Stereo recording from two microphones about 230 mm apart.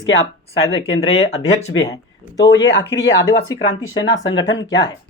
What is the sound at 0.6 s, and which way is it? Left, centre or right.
Speech, left.